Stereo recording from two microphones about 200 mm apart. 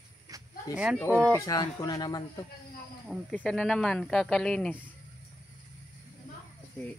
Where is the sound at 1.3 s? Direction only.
20° left (ahead or behind).